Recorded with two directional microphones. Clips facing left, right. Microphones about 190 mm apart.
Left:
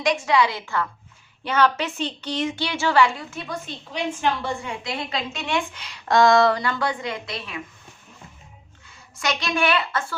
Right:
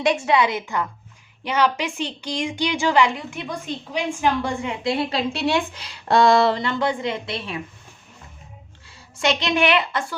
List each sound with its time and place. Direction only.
0.0 s a woman's voice: 25° right (ahead or behind)
4.8 s a woman's voice: 30° right (ahead or behind)
8.9 s a woman's voice: 25° right (ahead or behind)